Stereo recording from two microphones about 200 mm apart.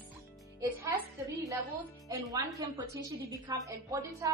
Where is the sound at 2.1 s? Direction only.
15° right (ahead or behind).